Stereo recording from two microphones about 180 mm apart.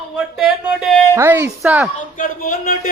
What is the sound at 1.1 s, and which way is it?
Speech, 15° right (ahead or behind).